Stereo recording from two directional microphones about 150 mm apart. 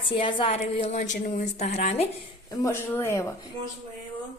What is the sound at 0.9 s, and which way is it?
Speech, 55° left (ahead or behind).